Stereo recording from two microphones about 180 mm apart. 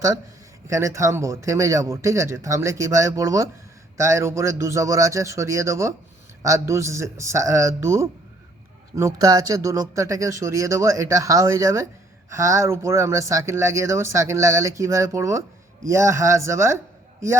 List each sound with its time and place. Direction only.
0.7 s speech: 15° right (ahead or behind)